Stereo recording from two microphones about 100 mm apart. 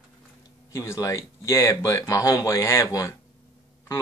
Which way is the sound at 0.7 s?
30° left (ahead or behind).